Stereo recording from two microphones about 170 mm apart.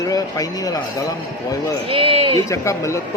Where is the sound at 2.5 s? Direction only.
15° left (ahead or behind).